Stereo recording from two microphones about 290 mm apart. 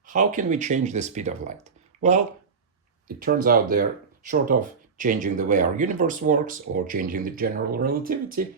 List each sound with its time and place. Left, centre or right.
0.0 s speech: right
1.6 s a sound: right
3.2 s speech: right